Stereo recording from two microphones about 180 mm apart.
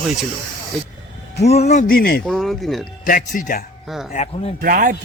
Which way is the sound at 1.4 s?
35° left (ahead or behind).